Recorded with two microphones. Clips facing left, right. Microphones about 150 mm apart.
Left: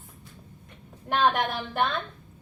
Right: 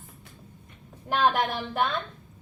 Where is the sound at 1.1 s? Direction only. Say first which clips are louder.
Even; centre (ahead or behind).